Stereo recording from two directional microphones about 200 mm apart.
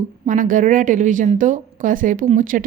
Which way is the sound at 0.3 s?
40° right (ahead or behind).